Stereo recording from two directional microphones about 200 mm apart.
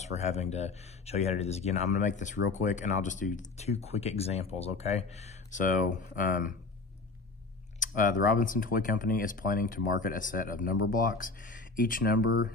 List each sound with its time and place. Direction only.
0.0 s speech: 35° left (ahead or behind)
7.8 s speech: 40° left (ahead or behind)